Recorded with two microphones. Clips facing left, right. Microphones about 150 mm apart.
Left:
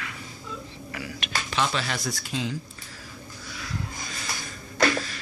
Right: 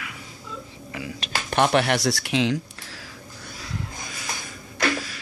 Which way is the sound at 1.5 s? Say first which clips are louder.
Right 8 dB; 60° right (ahead or behind).